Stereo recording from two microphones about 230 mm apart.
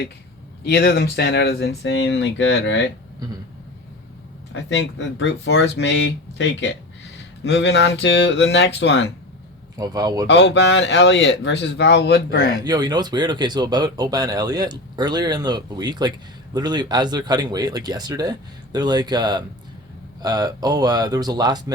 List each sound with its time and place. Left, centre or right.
0.6 s speech: left
4.5 s speech: left
9.7 s speech: centre
10.2 s speech: left
12.6 s speech: centre